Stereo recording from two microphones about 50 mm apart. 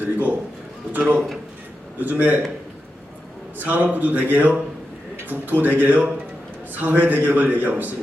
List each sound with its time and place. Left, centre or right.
0.0 s a man's voice: right
3.6 s a man's voice: right